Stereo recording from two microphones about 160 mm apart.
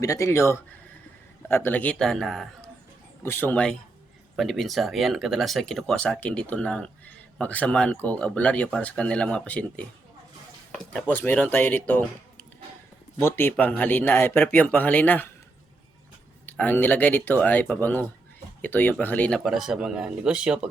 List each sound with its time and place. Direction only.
0.0 s speech: 20° left (ahead or behind); by 2.5 s centre (ahead or behind)
3.2 s speech: 15° left (ahead or behind)
11.1 s speech: 10° left (ahead or behind)
16.5 s speech: 10° left (ahead or behind)
19.5 s speech: centre (ahead or behind)